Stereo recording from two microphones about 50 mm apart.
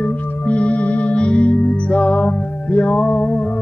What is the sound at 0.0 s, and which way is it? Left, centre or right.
Music, left.